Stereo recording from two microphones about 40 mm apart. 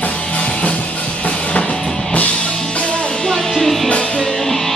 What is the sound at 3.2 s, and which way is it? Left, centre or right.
Music, centre.